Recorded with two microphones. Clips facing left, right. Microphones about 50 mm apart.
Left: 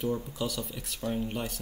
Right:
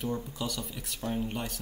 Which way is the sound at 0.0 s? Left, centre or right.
Centre.